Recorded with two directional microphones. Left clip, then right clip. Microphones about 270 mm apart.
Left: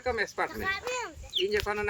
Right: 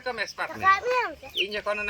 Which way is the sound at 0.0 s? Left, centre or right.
Centre.